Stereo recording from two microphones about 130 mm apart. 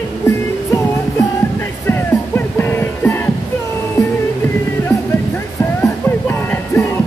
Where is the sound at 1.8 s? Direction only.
15° left (ahead or behind).